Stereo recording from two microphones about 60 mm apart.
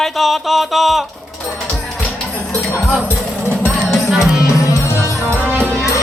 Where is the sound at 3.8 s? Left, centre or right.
Centre.